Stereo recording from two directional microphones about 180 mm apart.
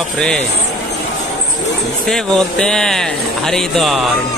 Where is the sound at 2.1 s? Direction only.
5° left (ahead or behind).